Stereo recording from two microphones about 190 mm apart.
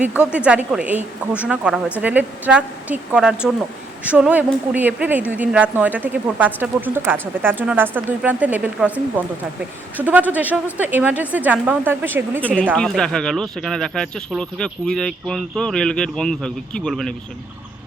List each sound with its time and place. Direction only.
0.2 s speech: 5° right (ahead or behind)
12.7 s speech: 5° left (ahead or behind)